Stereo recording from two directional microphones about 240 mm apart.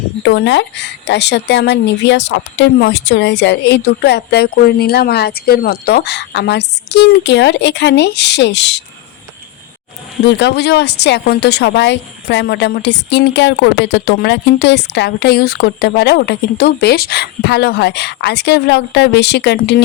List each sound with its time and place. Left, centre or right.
0.2 s speech: left
10.2 s speech: left